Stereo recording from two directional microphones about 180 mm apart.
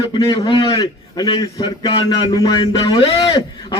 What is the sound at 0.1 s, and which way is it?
A man's voice, 25° left (ahead or behind).